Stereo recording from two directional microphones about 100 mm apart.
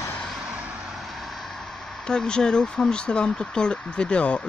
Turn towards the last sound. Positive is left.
turn(degrees=10)  # may be behind; listen again after turning